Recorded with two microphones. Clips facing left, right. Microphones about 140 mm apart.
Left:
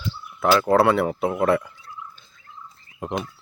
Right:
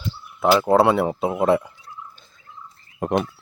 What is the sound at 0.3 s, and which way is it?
Speech, 20° right (ahead or behind).